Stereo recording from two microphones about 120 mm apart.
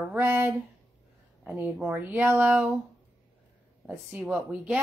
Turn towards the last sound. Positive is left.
turn(degrees=-10)  # may be behind; listen again after turning